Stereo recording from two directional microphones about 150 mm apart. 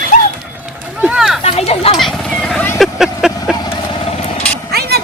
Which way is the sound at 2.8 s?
Centre (ahead or behind).